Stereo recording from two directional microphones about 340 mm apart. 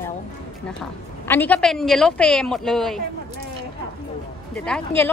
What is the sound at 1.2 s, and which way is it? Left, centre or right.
A woman's voice, centre.